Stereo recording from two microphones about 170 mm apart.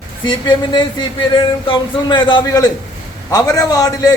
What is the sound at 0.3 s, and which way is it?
A man's voice, 25° left (ahead or behind).